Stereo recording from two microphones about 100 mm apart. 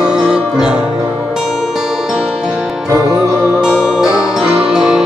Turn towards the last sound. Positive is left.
turn(degrees=-5)  # may be behind; listen again after turning